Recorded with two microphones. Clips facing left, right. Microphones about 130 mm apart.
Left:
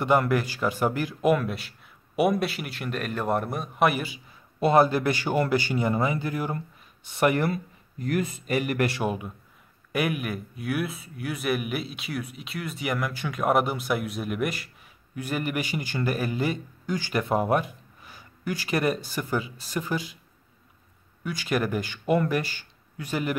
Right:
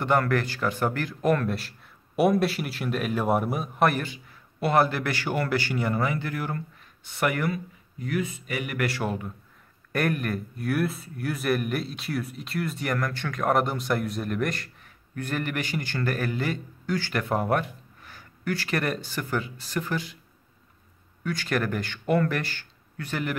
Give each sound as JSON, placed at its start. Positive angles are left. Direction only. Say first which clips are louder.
{"t": 0.0, "sound": "speech", "louder": "left 1 dB", "side_deg": 15}
{"t": 4.6, "sound": "speech", "louder": "left 3 dB", "side_deg": 20}
{"t": 8.1, "sound": "speech", "louder": "left 3 dB", "side_deg": 45}
{"t": 8.8, "sound": "speech", "louder": "left 1 dB", "side_deg": 20}
{"t": 9.9, "sound": "speech", "louder": "right 1 dB", "side_deg": 5}
{"t": 21.2, "sound": "speech", "louder": "left 1 dB", "side_deg": 15}